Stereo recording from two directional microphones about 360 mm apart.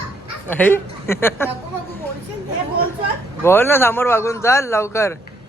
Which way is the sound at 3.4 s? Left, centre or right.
Centre.